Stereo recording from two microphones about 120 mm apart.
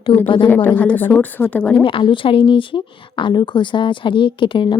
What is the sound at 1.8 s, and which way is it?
A woman's voice, 45° left (ahead or behind).